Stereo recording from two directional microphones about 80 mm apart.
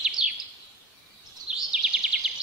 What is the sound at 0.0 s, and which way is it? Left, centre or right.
Bird vocalization, centre.